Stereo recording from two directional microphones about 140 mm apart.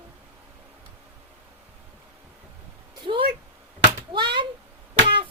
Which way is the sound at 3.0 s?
35° right (ahead or behind).